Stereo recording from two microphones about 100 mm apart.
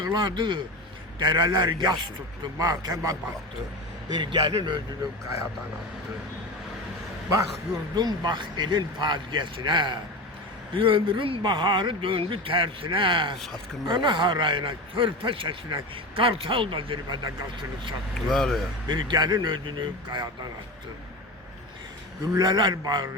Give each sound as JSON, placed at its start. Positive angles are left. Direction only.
{"t": 0.0, "sound": "speech", "side_deg": -45}
{"t": 4.2, "sound": "speech", "side_deg": -50}
{"t": 7.9, "sound": "a man's voice", "side_deg": -45}
{"t": 18.3, "sound": "speech", "side_deg": 5}
{"t": 18.9, "sound": "speech", "side_deg": -50}
{"t": 22.2, "sound": "speech", "side_deg": -40}